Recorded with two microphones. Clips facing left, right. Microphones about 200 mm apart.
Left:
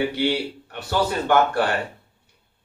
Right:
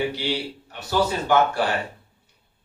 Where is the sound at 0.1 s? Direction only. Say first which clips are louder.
Left 4 dB; 60° left (ahead or behind).